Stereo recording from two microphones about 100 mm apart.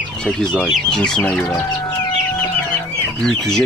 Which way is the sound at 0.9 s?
5° left (ahead or behind).